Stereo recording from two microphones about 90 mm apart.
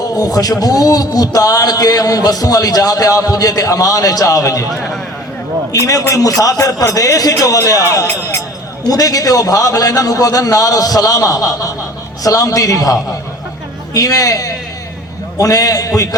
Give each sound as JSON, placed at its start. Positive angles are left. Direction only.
{"t": 0.0, "sound": "a man's voice", "side_deg": 45}
{"t": 4.7, "sound": "a man's voice", "side_deg": 0}
{"t": 5.8, "sound": "a man's voice", "side_deg": 40}
{"t": 8.1, "sound": "music", "side_deg": 35}
{"t": 8.9, "sound": "a man's voice", "side_deg": 45}